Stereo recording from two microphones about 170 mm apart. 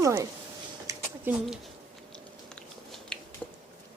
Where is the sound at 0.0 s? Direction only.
20° right (ahead or behind).